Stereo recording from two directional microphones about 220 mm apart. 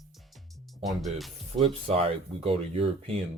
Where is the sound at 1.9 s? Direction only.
25° right (ahead or behind).